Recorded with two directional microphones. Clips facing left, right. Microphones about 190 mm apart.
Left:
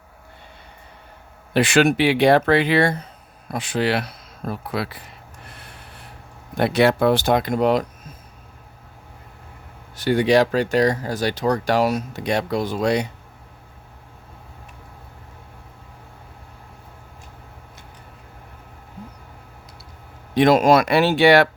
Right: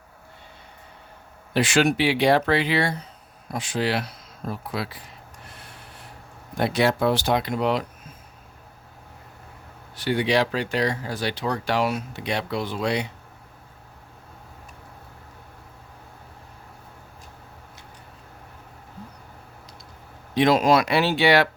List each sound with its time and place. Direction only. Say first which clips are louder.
1.5 s speech: left 4 dB; 60° left (ahead or behind)
3.5 s speech: left 3 dB; 60° left (ahead or behind)
6.6 s speech: left 4 dB; 60° left (ahead or behind); by 7.9 s 45° left (ahead or behind)
9.9 s speech: left 5 dB; 45° left (ahead or behind)
20.3 s speech: left 4 dB; 50° left (ahead or behind)